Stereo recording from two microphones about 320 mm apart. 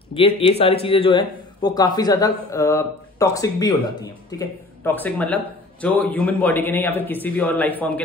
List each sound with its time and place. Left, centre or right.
0.1 s speech: centre